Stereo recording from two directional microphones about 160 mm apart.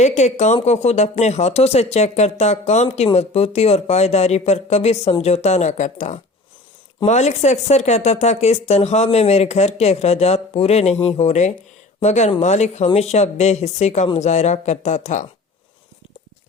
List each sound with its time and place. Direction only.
0.0 s speech: 45° left (ahead or behind)